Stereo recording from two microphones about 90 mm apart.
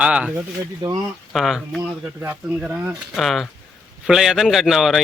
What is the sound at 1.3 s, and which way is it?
Speech, centre (ahead or behind).